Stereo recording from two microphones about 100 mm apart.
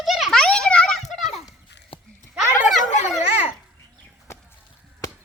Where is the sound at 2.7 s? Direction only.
Centre (ahead or behind).